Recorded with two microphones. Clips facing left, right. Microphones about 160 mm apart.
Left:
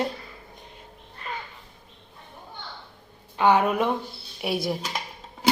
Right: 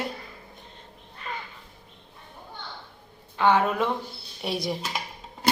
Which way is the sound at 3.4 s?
15° left (ahead or behind).